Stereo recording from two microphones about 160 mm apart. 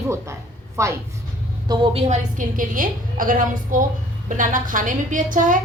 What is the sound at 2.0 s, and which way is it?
A woman's voice, 50° right (ahead or behind).